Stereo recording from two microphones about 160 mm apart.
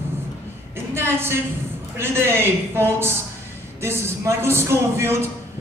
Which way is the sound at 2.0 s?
15° right (ahead or behind).